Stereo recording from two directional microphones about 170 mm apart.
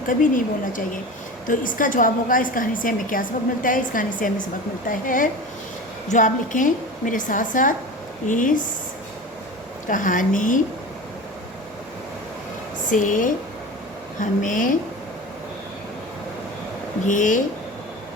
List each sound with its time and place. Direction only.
0.1 s a woman's voice: 50° left (ahead or behind)
9.8 s a woman's voice: 50° left (ahead or behind)
12.9 s a woman's voice: 50° left (ahead or behind)
17.1 s a woman's voice: 50° left (ahead or behind)